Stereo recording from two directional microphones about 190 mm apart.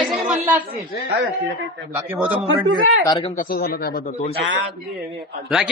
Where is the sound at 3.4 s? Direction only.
50° left (ahead or behind).